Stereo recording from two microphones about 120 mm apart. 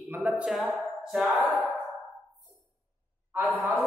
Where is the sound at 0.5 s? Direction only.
Centre (ahead or behind).